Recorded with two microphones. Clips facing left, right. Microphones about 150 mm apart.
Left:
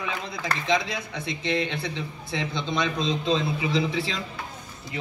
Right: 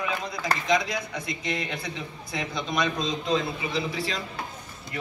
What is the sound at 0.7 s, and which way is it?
A man's voice, 30° left (ahead or behind).